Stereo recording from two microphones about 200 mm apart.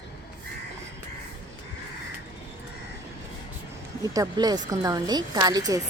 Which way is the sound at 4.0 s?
20° right (ahead or behind).